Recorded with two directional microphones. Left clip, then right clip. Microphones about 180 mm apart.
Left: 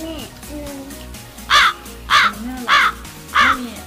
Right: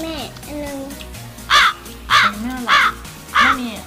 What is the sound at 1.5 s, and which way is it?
Crow, centre (ahead or behind).